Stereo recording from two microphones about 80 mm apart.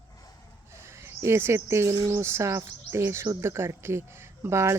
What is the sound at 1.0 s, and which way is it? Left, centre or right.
Speech, right.